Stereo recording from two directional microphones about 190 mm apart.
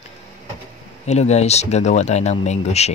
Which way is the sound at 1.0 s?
35° left (ahead or behind).